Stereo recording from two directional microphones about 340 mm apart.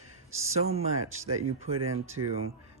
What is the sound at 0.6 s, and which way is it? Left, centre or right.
Speech, centre.